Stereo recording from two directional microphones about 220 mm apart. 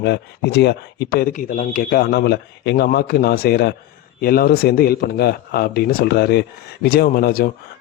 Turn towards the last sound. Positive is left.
turn(degrees=45)  # may be behind; listen again after turning